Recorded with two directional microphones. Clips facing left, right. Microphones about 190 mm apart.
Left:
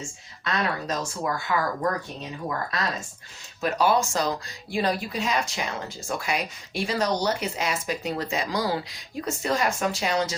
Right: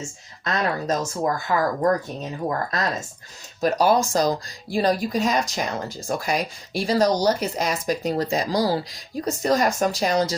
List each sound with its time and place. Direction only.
0.4 s speech: 40° right (ahead or behind)